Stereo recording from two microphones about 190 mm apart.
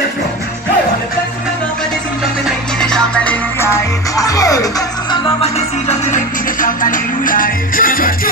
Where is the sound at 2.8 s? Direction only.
5° left (ahead or behind).